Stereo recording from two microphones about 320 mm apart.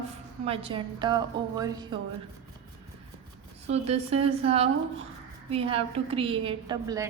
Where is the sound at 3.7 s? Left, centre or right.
Centre.